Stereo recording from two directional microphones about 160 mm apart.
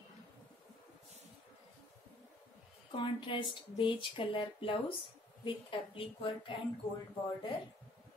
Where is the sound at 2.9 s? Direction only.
30° left (ahead or behind).